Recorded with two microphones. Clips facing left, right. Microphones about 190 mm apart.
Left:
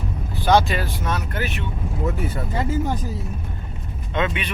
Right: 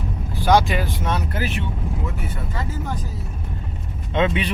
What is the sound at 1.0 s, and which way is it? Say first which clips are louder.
Speech: right 1 dB; 30° right (ahead or behind).